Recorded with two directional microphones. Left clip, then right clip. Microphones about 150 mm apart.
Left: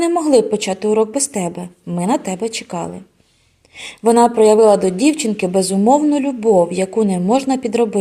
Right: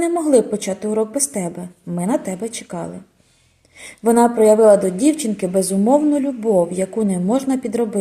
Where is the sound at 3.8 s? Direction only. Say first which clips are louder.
Left 3 dB; 25° left (ahead or behind).